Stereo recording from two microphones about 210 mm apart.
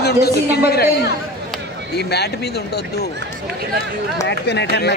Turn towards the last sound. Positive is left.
turn(degrees=50)  # may be behind; listen again after turning